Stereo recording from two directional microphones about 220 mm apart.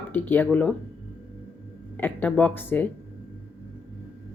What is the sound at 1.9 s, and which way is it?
Speech, 10° left (ahead or behind).